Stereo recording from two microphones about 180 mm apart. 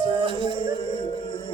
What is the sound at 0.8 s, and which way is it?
Music, 30° left (ahead or behind).